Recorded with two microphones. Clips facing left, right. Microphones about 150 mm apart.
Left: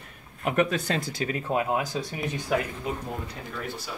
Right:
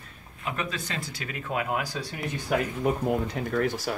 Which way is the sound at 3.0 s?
90° right.